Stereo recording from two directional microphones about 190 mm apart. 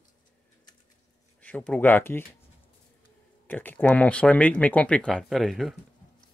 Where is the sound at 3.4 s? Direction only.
10° left (ahead or behind).